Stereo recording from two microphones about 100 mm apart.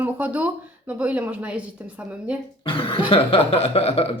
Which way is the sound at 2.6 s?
65° left (ahead or behind).